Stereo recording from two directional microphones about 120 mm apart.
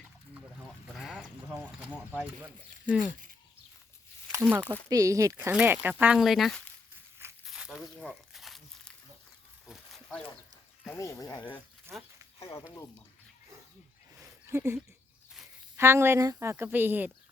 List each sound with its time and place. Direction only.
0.9 s a sound: centre (ahead or behind)
2.1 s speech: 10° right (ahead or behind)
3.1 s speech: 90° right
4.3 s speech: 15° right (ahead or behind)
4.9 s a woman's voice: 30° right (ahead or behind)
5.5 s speech: 15° right (ahead or behind)
6.1 s speech: centre (ahead or behind)
7.4 s snake: 5° right (ahead or behind)
7.9 s a sound: centre (ahead or behind)
10.9 s speech: 25° left (ahead or behind)
11.9 s a woman's voice: 20° right (ahead or behind)
12.5 s speech: 25° left (ahead or behind)
14.2 s a sound: 20° right (ahead or behind)
15.7 s a woman's voice: 20° right (ahead or behind)